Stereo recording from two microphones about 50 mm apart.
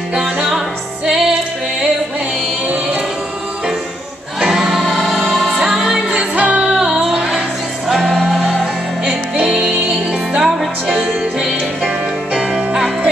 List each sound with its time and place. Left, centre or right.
0.1 s music: centre
4.4 s music: centre
9.0 s music: centre
12.4 s music: centre